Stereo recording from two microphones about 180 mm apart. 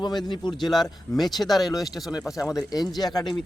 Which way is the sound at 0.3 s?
25° left (ahead or behind).